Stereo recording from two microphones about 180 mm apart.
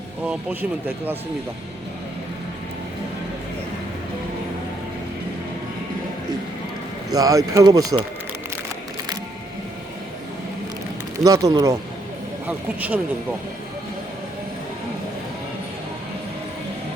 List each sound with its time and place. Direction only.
0.3 s speech: 10° right (ahead or behind)
7.1 s speech: 20° right (ahead or behind)
11.2 s speech: 20° right (ahead or behind)